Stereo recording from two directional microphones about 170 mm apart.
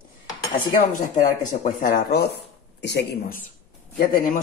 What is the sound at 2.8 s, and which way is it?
Speech, 90° left.